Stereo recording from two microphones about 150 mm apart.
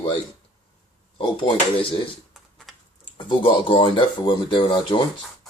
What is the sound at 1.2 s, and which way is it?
Speech, 35° left (ahead or behind).